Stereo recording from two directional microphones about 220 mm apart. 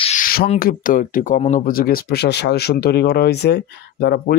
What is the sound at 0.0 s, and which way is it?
Speech, 35° left (ahead or behind).